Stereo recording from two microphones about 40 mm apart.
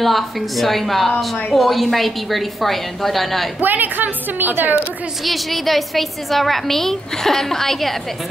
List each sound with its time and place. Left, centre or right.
0.0 s a woman's voice: centre
3.6 s a woman's voice: right
5.2 s a woman's voice: centre